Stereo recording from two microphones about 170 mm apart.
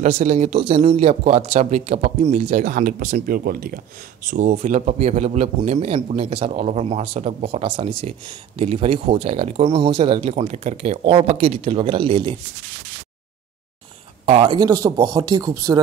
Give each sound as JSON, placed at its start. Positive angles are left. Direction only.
{"t": 0.0, "sound": "speech", "side_deg": -40}
{"t": 4.3, "sound": "speech", "side_deg": -45}
{"t": 14.2, "sound": "speech", "side_deg": -35}